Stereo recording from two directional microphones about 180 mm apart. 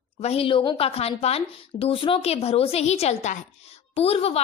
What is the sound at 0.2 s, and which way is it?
A woman's voice, 35° left (ahead or behind).